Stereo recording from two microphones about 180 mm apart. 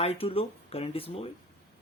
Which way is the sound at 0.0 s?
30° left (ahead or behind).